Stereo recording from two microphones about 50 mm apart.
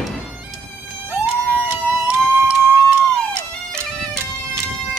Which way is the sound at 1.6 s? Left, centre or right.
Right.